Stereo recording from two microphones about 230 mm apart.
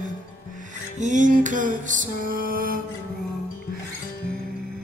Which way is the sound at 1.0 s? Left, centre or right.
Right.